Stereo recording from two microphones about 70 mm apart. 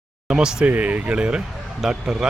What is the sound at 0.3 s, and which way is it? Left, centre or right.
Speech, centre.